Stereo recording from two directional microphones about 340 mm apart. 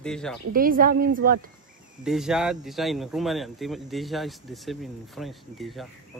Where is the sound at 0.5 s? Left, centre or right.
Right.